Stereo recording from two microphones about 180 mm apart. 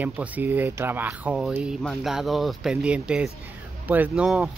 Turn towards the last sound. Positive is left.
turn(degrees=0)  # may be behind; listen again after turning